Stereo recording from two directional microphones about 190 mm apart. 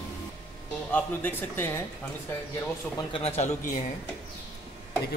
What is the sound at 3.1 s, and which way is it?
Speech, 35° left (ahead or behind).